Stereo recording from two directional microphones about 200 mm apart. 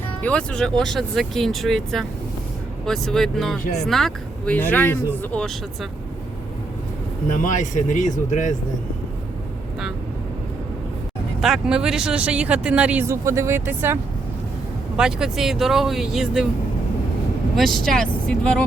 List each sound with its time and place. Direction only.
0.2 s speech: 5° left (ahead or behind)
7.3 s speech: 40° left (ahead or behind)
11.3 s speech: centre (ahead or behind)
17.6 s speech: centre (ahead or behind)